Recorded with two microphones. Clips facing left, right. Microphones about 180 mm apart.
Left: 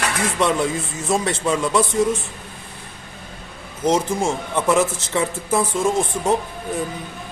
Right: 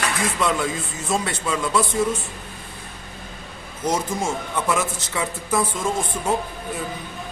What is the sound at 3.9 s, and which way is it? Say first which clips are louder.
Speech: left 4 dB; 25° left (ahead or behind).